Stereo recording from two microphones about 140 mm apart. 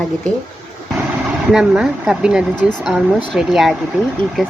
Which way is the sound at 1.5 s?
5° right (ahead or behind).